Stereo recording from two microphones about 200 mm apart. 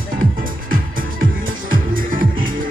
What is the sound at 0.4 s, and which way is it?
Music, 45° right (ahead or behind).